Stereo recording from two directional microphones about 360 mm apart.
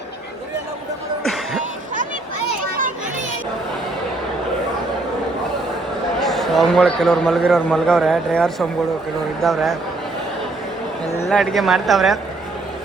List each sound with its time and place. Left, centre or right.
1.2 s music: centre
2.6 s children playing: right
6.1 s a man's voice: centre
11.3 s a man's voice: centre